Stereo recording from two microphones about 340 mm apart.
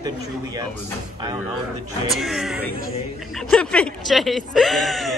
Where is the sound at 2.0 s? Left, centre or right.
Centre.